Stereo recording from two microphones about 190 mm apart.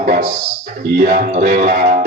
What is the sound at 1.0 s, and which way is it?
Music, 50° right (ahead or behind).